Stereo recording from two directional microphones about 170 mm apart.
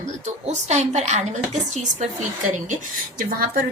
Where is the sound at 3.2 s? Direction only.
60° right (ahead or behind).